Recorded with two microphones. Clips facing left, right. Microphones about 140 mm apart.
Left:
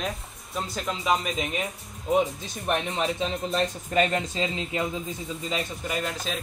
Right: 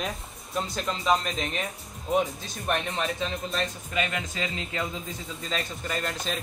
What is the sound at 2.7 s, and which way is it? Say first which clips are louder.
Speech: left 3 dB; 15° left (ahead or behind).